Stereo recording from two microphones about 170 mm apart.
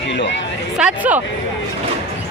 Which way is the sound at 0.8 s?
10° right (ahead or behind).